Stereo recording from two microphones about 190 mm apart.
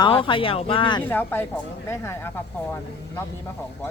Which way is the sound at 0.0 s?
25° left (ahead or behind).